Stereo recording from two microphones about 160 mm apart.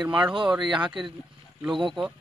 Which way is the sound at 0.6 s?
30° right (ahead or behind).